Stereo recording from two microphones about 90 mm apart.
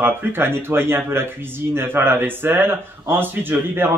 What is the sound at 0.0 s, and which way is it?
Speech, 25° right (ahead or behind).